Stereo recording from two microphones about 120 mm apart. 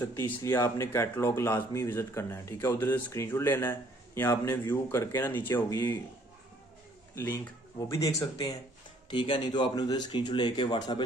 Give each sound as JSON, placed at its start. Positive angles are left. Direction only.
{"t": 0.1, "sound": "speech", "side_deg": 25}
{"t": 7.2, "sound": "speech", "side_deg": 20}
{"t": 9.1, "sound": "speech", "side_deg": 40}